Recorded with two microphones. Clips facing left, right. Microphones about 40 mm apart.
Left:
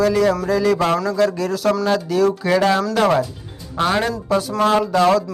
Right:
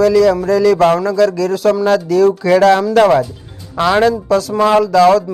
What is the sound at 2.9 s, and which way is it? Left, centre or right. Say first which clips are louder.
Speech: right 6 dB; right.